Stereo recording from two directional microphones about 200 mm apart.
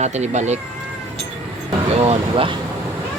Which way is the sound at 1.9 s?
30° right (ahead or behind).